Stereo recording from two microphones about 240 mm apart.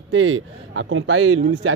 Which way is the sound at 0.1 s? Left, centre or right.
Right.